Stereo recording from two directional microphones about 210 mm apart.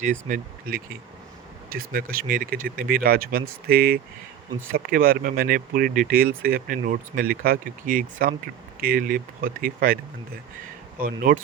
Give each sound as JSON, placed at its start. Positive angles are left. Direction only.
{"t": 0.0, "sound": "speech", "side_deg": -40}
{"t": 11.0, "sound": "speech", "side_deg": -45}